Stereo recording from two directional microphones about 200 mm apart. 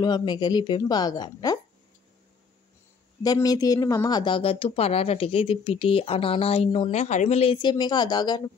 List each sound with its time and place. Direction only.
0.0 s speech: 20° left (ahead or behind)
3.2 s speech: 20° left (ahead or behind)